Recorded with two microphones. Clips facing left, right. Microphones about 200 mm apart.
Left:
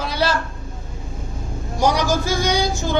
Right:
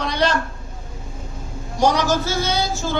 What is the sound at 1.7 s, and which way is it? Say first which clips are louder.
Speech: right 1 dB; 10° left (ahead or behind).